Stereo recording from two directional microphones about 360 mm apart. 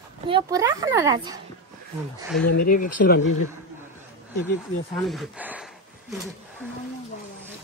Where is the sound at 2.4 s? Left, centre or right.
Left.